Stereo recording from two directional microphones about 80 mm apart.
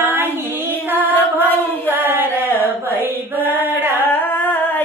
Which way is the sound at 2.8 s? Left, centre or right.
Right.